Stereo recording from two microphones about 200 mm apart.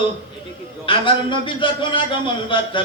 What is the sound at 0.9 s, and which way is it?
A man's voice, 25° left (ahead or behind).